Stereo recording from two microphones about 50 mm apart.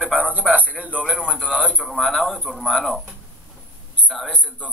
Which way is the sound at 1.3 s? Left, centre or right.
Centre.